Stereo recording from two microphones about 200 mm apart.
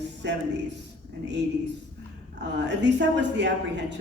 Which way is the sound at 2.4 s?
60° right (ahead or behind).